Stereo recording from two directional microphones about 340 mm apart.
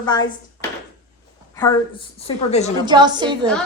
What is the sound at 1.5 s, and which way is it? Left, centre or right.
A woman's voice, centre.